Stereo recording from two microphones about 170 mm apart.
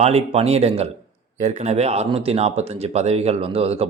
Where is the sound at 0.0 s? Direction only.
40° right (ahead or behind).